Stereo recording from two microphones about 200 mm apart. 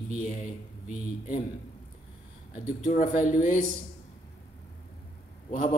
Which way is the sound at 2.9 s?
40° left (ahead or behind).